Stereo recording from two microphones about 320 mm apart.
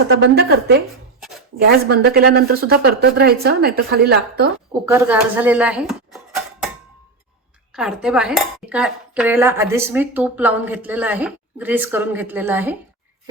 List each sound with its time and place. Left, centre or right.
0.2 s a woman's voice: right
4.9 s speech: centre
7.8 s dishes: centre